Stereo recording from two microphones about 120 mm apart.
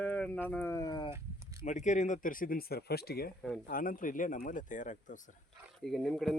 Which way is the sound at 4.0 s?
90° left.